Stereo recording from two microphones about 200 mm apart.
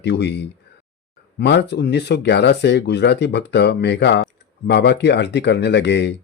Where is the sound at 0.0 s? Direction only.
55° left (ahead or behind).